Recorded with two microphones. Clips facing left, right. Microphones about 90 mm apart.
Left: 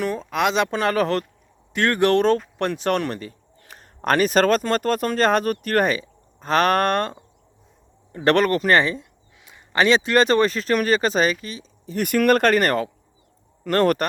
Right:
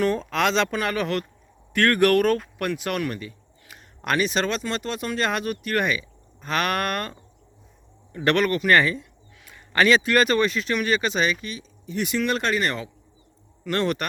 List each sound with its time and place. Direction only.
0.0 s speech: 5° left (ahead or behind)
0.7 s speech: 35° left (ahead or behind)
1.7 s speech: 20° left (ahead or behind)
12.0 s speech: 55° left (ahead or behind)